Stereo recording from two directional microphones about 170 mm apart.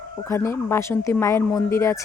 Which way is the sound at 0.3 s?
15° left (ahead or behind).